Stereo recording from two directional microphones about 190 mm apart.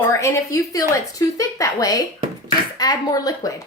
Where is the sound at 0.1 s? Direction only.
15° left (ahead or behind).